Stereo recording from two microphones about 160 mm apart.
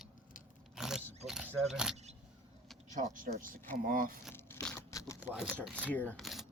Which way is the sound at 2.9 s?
50° right (ahead or behind).